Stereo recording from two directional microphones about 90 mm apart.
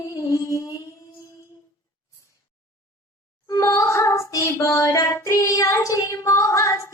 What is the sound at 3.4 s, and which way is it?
Music, 35° left (ahead or behind).